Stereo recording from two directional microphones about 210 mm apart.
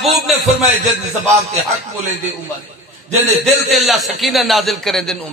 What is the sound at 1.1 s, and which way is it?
Speech, 35° right (ahead or behind).